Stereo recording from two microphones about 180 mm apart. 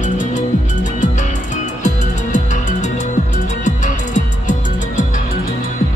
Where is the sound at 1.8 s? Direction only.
40° left (ahead or behind).